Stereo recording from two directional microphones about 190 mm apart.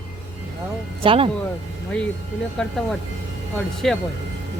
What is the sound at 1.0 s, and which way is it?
Speech, 30° right (ahead or behind).